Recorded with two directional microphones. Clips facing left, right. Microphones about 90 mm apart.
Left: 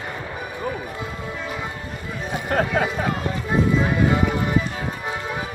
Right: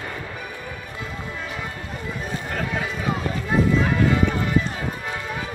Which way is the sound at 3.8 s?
20° left (ahead or behind).